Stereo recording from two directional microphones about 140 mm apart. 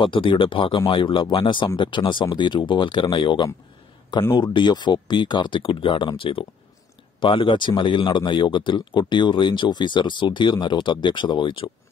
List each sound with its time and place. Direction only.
0.0 s speech: 35° left (ahead or behind)
4.2 s speech: 20° left (ahead or behind)
4.6 s speech: 30° left (ahead or behind)